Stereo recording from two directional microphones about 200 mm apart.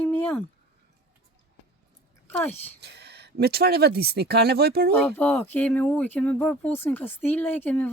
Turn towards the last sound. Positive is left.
turn(degrees=10)  # may be behind; listen again after turning